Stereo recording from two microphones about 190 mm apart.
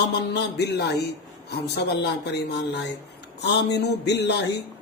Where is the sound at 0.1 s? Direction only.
60° left (ahead or behind).